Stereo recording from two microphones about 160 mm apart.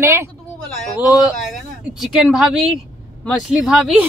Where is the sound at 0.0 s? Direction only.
15° right (ahead or behind).